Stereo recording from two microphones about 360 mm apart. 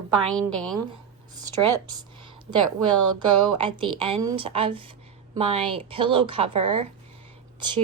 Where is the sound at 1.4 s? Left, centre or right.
Right.